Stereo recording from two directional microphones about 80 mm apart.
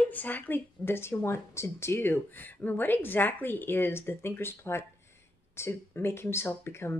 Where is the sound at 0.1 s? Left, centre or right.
Left.